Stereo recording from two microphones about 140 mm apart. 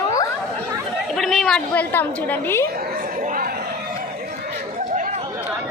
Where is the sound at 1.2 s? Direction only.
Centre (ahead or behind).